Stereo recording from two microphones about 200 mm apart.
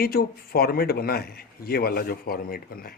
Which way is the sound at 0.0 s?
50° left (ahead or behind).